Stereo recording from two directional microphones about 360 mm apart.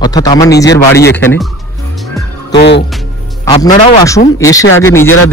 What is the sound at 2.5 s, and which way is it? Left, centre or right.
Speech, left.